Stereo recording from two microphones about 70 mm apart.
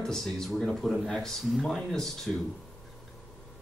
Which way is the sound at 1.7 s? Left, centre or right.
Centre.